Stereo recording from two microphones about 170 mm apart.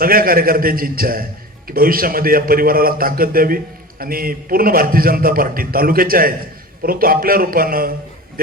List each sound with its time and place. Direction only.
0.0 s a man's voice: 60° right (ahead or behind)